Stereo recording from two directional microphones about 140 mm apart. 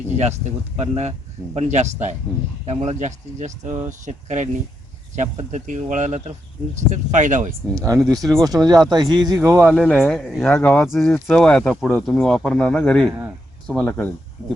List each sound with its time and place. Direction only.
0.2 s speech: 50° right (ahead or behind)
7.8 s speech: 20° right (ahead or behind)
8.2 s speech: centre (ahead or behind)
8.4 s speech: 30° right (ahead or behind)
9.8 s speech: 5° left (ahead or behind)
10.5 s speech: 10° left (ahead or behind)
10.8 s speech: centre (ahead or behind)